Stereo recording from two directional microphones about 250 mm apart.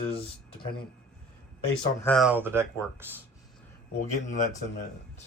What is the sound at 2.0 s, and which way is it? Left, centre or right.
Speech, centre.